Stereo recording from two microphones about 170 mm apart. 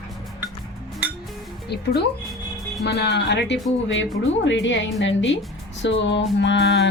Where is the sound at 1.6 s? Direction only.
75° left (ahead or behind).